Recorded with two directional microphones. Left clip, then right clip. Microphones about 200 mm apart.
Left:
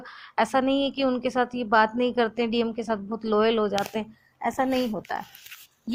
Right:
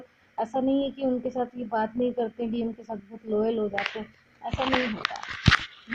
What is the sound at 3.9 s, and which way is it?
Speech, 55° left (ahead or behind).